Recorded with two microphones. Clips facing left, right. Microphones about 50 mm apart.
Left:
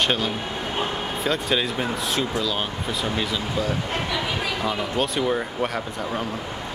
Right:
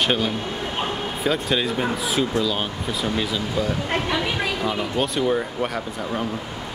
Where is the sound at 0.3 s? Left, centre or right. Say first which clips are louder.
Right 1 dB; centre.